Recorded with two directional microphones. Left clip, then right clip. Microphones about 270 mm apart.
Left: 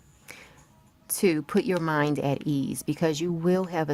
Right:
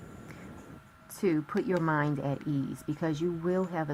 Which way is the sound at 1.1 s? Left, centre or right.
Left.